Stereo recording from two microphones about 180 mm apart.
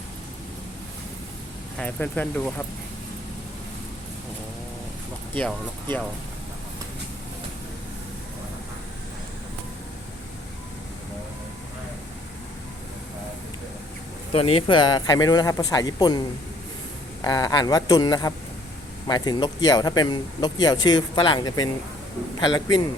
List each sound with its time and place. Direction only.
1.8 s speech: 10° left (ahead or behind)
5.4 s speech: 5° left (ahead or behind)
14.3 s speech: 30° left (ahead or behind)
17.2 s speech: 20° left (ahead or behind)